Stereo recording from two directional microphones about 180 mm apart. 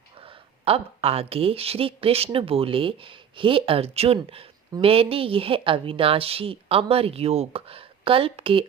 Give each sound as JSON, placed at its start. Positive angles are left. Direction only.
{"t": 0.6, "sound": "speech", "side_deg": -35}